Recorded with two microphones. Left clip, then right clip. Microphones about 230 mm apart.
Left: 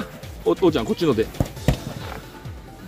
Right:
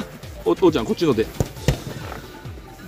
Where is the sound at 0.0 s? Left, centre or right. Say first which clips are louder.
Even; centre.